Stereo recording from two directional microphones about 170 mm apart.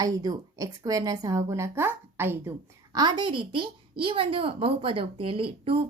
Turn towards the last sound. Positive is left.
turn(degrees=-35)  # may be behind; listen again after turning